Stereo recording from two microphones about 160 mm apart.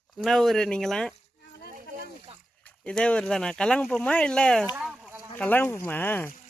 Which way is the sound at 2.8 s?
5° left (ahead or behind).